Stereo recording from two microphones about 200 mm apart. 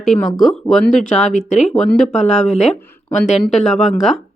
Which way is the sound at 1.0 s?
35° left (ahead or behind).